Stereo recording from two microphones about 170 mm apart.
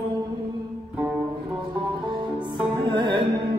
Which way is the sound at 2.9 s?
25° right (ahead or behind).